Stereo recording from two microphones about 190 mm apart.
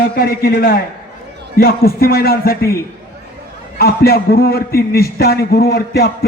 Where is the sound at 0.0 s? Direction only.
55° left (ahead or behind).